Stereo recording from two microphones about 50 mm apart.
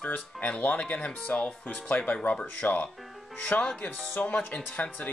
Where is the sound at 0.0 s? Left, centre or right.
Left.